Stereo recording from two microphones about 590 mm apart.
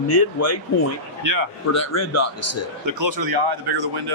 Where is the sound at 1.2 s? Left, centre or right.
Right.